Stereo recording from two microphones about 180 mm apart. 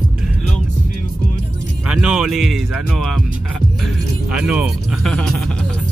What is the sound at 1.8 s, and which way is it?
Speech, 5° right (ahead or behind).